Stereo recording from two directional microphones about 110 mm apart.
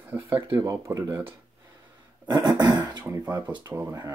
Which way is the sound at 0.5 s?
25° right (ahead or behind).